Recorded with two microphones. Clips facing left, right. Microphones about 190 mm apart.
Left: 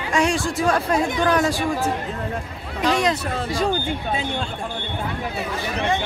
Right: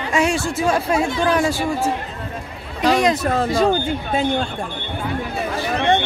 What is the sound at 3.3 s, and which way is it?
Speech, 55° right (ahead or behind).